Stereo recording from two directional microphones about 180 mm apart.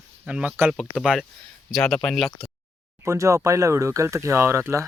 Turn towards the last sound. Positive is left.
turn(degrees=-15)  # may be behind; listen again after turning